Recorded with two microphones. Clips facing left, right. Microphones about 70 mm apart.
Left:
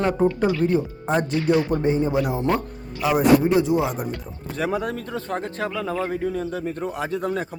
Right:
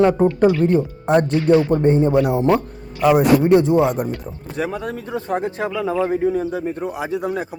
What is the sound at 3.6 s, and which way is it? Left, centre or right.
Speech, right.